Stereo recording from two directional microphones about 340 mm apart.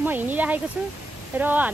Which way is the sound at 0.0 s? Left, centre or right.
Centre.